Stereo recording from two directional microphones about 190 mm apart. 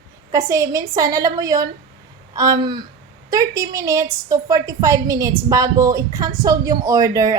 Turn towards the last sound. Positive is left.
turn(degrees=-20)  # may be behind; listen again after turning